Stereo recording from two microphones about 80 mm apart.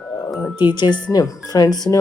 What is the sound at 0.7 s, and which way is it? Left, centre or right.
Speech, left.